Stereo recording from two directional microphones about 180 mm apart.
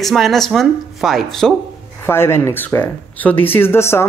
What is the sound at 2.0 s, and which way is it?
Speech, 15° left (ahead or behind).